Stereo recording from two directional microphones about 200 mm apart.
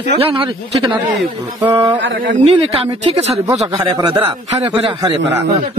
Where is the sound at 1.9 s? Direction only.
65° right (ahead or behind).